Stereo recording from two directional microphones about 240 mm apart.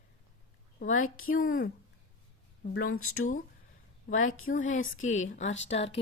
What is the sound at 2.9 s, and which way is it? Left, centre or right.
Speech, left.